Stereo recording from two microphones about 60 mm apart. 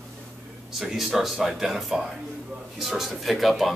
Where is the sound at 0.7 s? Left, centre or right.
Centre.